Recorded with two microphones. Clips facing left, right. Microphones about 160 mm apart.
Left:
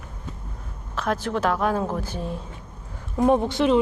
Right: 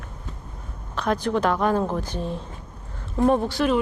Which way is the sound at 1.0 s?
5° left (ahead or behind).